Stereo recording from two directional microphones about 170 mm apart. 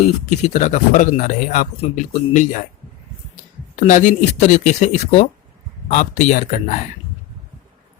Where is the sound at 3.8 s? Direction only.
45° left (ahead or behind).